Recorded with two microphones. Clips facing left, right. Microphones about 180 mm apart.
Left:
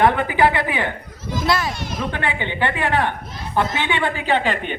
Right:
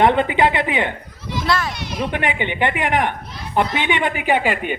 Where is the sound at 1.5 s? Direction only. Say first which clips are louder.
Even; 10° left (ahead or behind).